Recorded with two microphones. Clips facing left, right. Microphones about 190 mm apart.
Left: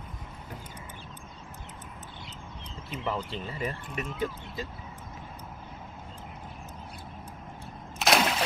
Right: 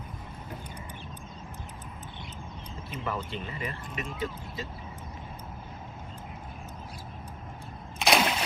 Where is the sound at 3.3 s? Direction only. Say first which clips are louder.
Left 2 dB; 40° left (ahead or behind).